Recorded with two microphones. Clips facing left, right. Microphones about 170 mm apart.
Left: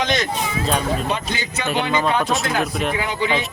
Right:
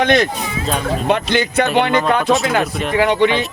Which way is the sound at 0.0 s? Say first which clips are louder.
Right 6 dB; 60° right (ahead or behind).